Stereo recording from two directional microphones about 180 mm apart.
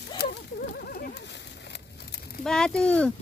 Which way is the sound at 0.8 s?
55° left (ahead or behind).